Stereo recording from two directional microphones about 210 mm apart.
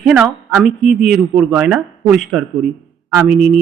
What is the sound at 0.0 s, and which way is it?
A woman's voice, 5° right (ahead or behind).